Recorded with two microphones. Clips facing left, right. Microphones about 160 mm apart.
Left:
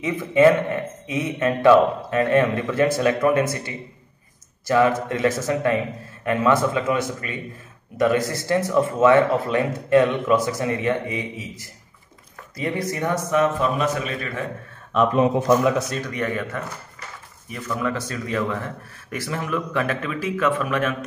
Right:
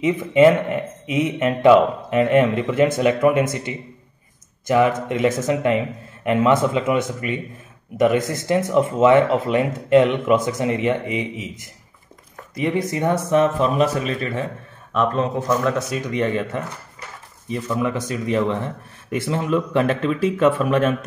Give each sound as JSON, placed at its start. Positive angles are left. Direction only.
{"t": 0.0, "sound": "speech", "side_deg": -20}
{"t": 15.0, "sound": "speech", "side_deg": 10}
{"t": 16.1, "sound": "speech", "side_deg": -25}